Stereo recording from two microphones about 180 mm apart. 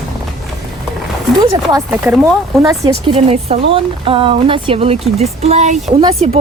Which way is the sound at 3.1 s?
35° right (ahead or behind).